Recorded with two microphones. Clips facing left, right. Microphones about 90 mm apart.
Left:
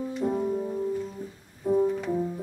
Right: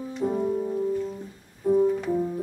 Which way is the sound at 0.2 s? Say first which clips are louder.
Right 3 dB; centre (ahead or behind).